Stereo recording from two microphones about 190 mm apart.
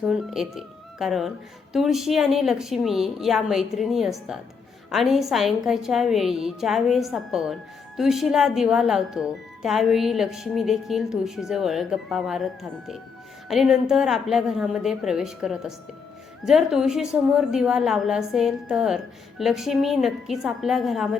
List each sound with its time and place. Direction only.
0.0 s a woman's voice: centre (ahead or behind)
13.5 s a woman's voice: centre (ahead or behind)